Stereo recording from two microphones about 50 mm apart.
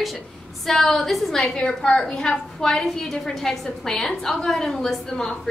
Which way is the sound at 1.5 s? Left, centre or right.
Centre.